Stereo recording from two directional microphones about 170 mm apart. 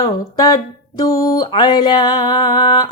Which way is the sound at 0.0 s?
20° left (ahead or behind).